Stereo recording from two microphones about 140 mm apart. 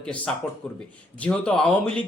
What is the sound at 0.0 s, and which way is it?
A man's voice, 5° left (ahead or behind).